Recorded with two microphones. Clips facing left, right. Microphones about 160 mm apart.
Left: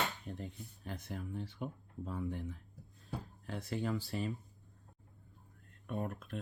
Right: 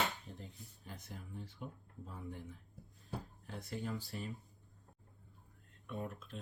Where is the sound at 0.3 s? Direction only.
75° left (ahead or behind).